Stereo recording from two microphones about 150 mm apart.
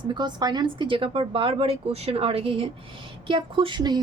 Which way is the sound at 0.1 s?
30° right (ahead or behind).